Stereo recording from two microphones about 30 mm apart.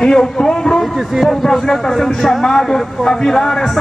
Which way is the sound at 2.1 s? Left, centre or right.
Centre.